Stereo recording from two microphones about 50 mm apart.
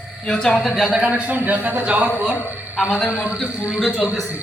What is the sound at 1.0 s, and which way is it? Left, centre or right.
A man's voice, right.